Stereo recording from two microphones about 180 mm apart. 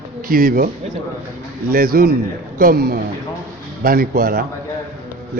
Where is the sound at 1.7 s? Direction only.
55° right (ahead or behind).